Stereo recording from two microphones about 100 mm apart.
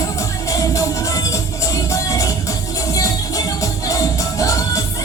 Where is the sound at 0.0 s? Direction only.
30° left (ahead or behind).